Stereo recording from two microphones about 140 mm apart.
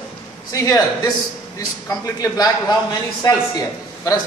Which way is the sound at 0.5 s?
25° left (ahead or behind).